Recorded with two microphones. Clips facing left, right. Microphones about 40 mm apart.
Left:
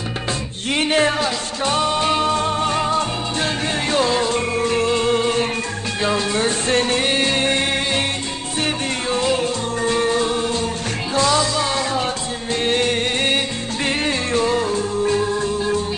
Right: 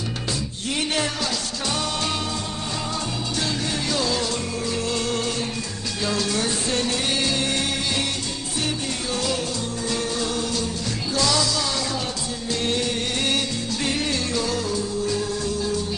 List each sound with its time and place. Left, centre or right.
0.7 s music: left
4.9 s music: left
9.1 s music: left
12.6 s music: left